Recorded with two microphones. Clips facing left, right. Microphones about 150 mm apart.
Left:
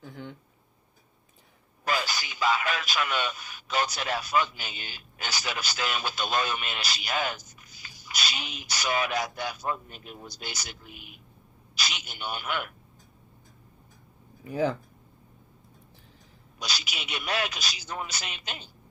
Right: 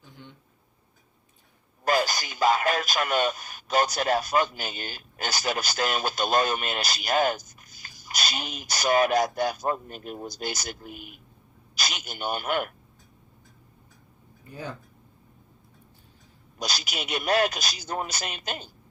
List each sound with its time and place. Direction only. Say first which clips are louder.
0.0 s a sound: left 7 dB; 75° left (ahead or behind)
1.8 s speech: right 5 dB; 45° right (ahead or behind)
14.4 s speech: left 10 dB; 90° left
16.6 s speech: right 4 dB; 45° right (ahead or behind)